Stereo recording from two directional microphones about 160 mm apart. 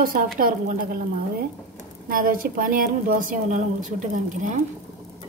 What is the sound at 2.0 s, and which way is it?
A woman's voice, 60° right (ahead or behind).